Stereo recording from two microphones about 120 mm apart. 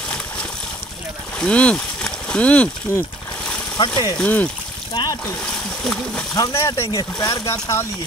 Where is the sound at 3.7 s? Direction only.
40° left (ahead or behind).